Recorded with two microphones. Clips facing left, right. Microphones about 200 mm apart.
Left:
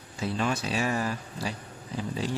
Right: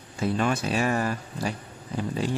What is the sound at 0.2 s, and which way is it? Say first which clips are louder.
Speech: right 4 dB; 50° right (ahead or behind).